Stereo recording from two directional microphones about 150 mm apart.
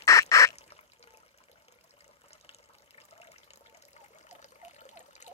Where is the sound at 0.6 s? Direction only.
45° left (ahead or behind).